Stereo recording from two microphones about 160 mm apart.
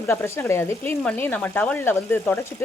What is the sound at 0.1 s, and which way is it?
Speech, 15° left (ahead or behind).